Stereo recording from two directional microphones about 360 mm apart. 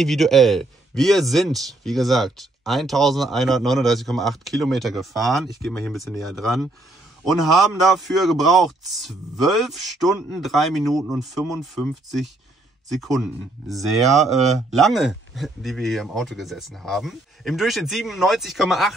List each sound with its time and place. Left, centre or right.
0.0 s speech: centre